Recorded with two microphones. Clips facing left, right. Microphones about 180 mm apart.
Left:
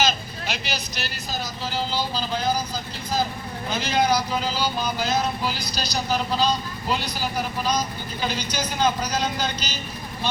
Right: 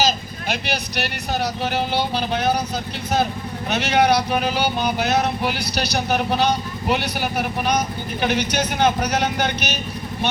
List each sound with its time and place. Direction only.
0.4 s speech: 55° right (ahead or behind)